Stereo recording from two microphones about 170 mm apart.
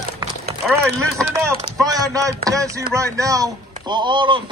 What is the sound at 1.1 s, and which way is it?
Speech, 20° right (ahead or behind).